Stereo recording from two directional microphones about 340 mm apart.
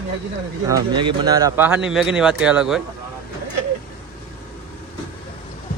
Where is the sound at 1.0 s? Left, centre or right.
Centre.